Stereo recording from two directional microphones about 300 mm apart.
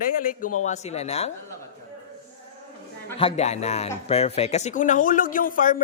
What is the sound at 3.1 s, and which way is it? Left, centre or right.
A man's voice, centre.